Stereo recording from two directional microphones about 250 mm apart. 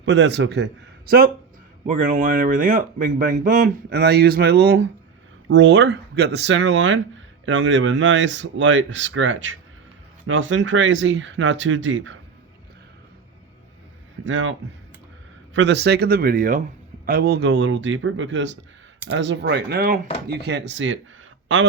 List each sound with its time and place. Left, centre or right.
0.0 s speech: right
14.3 s speech: right
15.5 s speech: right